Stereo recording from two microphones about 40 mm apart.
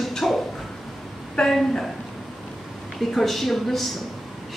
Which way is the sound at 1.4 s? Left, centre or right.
Centre.